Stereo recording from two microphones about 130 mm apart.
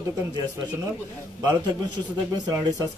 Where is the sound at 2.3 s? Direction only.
30° right (ahead or behind).